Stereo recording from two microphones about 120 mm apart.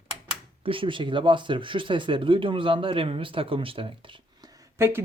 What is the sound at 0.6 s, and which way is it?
Speech, 45° right (ahead or behind).